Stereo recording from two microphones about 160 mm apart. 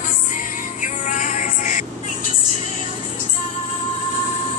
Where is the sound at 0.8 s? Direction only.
50° left (ahead or behind).